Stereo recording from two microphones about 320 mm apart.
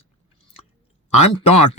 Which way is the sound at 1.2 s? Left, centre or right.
Centre.